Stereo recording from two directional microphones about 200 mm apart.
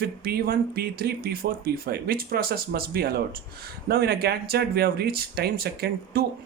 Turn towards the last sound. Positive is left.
turn(degrees=-50)  # may be behind; listen again after turning